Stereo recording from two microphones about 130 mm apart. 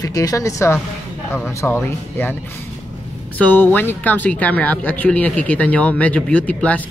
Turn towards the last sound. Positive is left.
turn(degrees=10)  # may be behind; listen again after turning